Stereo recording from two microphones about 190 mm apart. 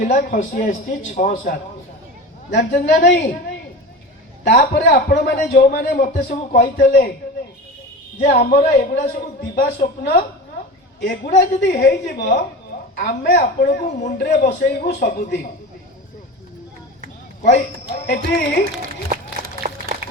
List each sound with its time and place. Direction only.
0.0 s a man's voice: 45° left (ahead or behind)
2.5 s a man's voice: 60° left (ahead or behind)
4.4 s a man's voice: 55° left (ahead or behind)
8.2 s a man's voice: 55° left (ahead or behind)
11.8 s a man's voice: 60° left (ahead or behind)
17.4 s speech: 35° left (ahead or behind)
18.0 s a man's voice: 55° left (ahead or behind)